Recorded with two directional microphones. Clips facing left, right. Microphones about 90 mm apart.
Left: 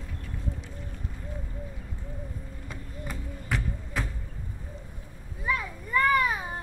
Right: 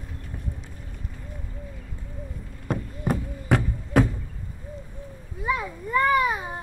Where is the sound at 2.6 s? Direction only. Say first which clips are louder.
Right 14 dB; 60° right (ahead or behind).